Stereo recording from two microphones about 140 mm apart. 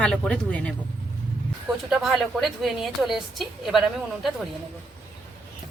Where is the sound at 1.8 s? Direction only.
5° right (ahead or behind).